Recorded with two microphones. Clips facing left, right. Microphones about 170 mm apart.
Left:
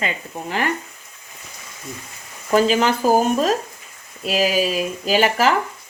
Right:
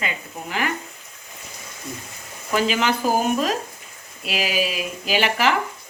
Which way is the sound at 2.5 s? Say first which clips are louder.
Left 5 dB; 35° left (ahead or behind).